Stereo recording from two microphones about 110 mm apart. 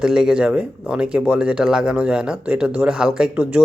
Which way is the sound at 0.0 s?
5° right (ahead or behind).